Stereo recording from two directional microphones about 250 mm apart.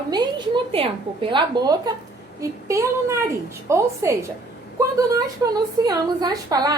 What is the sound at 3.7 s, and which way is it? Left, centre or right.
A woman's voice, centre.